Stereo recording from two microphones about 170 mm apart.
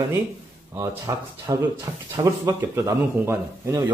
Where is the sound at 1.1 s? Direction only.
20° right (ahead or behind).